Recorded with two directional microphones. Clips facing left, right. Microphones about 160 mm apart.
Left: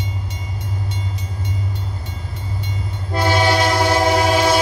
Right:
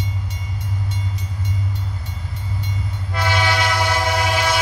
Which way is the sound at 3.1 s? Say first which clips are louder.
Left 5 dB; 35° left (ahead or behind).